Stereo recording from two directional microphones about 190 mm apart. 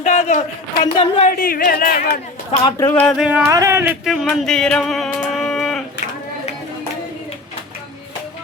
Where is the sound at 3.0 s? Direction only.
5° right (ahead or behind).